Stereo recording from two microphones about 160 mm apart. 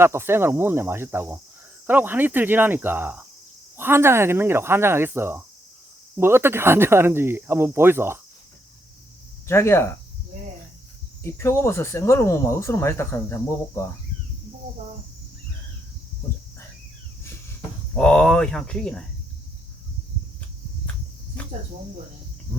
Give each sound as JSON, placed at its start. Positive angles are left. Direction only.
{"t": 0.0, "sound": "speech", "side_deg": -15}
{"t": 9.5, "sound": "speech", "side_deg": 15}
{"t": 11.2, "sound": "speech", "side_deg": 15}
{"t": 17.9, "sound": "speech", "side_deg": 5}